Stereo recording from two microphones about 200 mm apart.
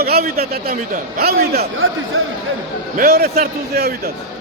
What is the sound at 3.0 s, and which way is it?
Speech, 50° right (ahead or behind).